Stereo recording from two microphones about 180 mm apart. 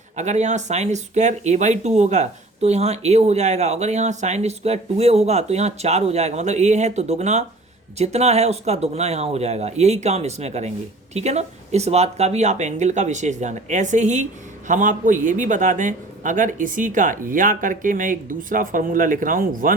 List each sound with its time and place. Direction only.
0.2 s a man's voice: 40° right (ahead or behind)